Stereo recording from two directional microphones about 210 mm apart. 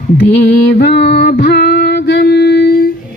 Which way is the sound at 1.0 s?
50° left (ahead or behind).